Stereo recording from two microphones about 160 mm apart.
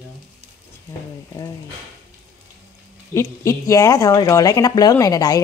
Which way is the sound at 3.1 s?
20° left (ahead or behind).